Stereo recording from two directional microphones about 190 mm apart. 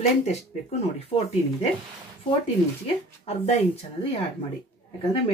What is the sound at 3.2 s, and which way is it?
Speech, 35° left (ahead or behind).